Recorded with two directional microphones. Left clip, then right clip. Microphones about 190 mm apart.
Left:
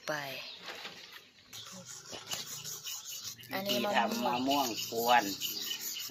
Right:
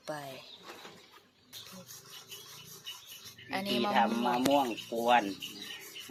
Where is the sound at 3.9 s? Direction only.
40° right (ahead or behind).